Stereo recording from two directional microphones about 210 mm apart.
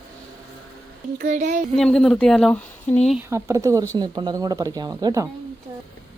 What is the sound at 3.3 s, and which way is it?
Speech, 15° right (ahead or behind).